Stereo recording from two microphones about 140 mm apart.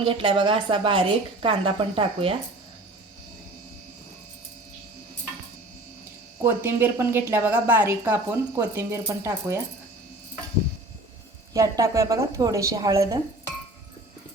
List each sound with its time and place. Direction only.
0.0 s a woman's voice: 40° right (ahead or behind)
6.4 s a woman's voice: 15° right (ahead or behind)
11.5 s a woman's voice: 20° right (ahead or behind)